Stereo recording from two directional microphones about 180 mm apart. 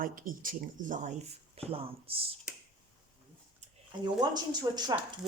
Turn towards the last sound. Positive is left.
turn(degrees=-25)  # may be behind; listen again after turning